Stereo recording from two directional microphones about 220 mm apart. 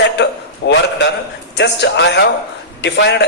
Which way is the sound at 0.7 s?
50° left (ahead or behind).